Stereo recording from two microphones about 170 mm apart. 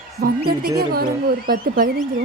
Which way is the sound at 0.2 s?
65° right (ahead or behind).